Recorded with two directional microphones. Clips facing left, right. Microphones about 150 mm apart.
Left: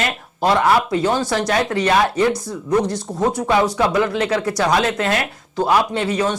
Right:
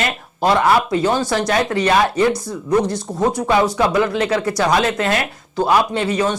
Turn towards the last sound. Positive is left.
turn(degrees=-10)  # may be behind; listen again after turning